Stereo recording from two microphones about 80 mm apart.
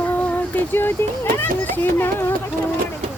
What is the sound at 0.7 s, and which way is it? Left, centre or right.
Speech, left.